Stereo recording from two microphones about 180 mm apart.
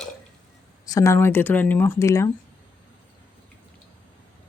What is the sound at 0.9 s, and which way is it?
Speech, 15° left (ahead or behind).